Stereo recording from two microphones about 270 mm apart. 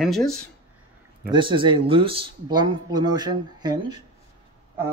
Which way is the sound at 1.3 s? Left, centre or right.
Centre.